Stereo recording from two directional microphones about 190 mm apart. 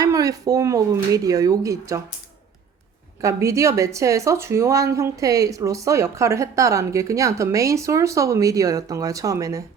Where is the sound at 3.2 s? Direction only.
15° right (ahead or behind).